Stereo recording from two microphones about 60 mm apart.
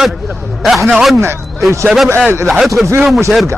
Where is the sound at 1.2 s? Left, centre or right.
Right.